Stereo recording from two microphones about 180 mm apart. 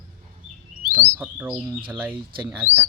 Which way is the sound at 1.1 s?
10° right (ahead or behind).